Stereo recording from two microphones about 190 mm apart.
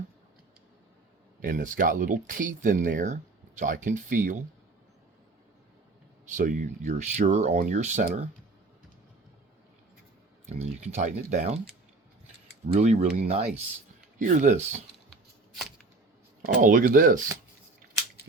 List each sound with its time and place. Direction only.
1.4 s speech: 45° right (ahead or behind)
6.3 s speech: 45° right (ahead or behind)
10.4 s speech: 35° right (ahead or behind)
12.8 s speech: 35° right (ahead or behind)
16.6 s speech: 45° right (ahead or behind)